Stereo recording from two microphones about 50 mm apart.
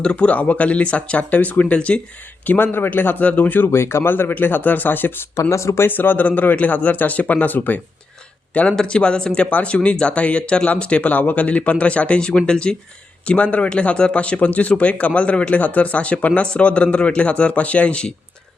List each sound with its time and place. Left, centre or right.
0.0 s speech: left
2.5 s speech: left
3.2 s speech: left
3.7 s speech: left
5.4 s speech: left
5.9 s speech: left
8.7 s speech: centre
9.5 s speech: left
9.7 s speech: left
13.2 s speech: left